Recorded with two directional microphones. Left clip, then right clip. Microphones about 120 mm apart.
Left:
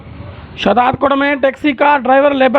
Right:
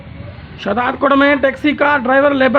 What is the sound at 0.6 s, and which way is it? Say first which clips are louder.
A man's voice: left 5 dB; 45° left (ahead or behind).